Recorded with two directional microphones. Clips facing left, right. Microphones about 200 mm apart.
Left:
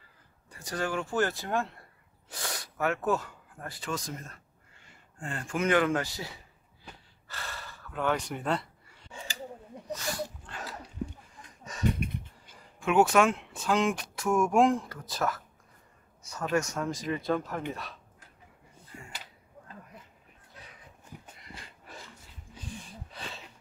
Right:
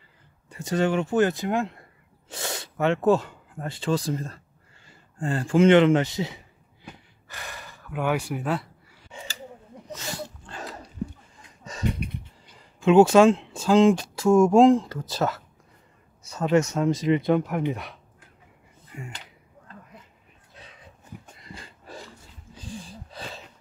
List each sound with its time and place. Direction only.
0.5 s speech: 25° right (ahead or behind)
4.8 s a sound: 35° right (ahead or behind); by 9.0 s 5° right (ahead or behind)
9.9 s dog: 25° right (ahead or behind)
12.8 s speech: 25° right (ahead or behind)
18.9 s speech: 20° right (ahead or behind)
22.6 s a sound: 35° right (ahead or behind)